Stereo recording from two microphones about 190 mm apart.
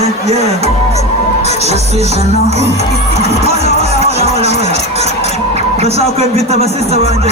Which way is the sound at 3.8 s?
35° right (ahead or behind).